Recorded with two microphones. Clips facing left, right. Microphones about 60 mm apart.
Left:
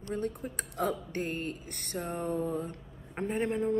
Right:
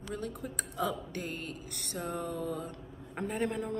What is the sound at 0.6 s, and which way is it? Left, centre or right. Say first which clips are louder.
Speech: left 2 dB; left.